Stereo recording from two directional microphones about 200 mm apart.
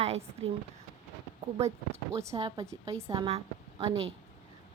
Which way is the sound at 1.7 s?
15° right (ahead or behind).